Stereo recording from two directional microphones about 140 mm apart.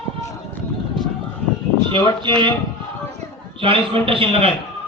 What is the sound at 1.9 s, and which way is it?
Speech, 35° right (ahead or behind).